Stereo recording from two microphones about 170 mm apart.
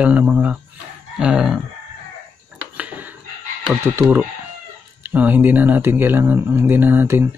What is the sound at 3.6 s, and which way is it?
Speech, 15° right (ahead or behind).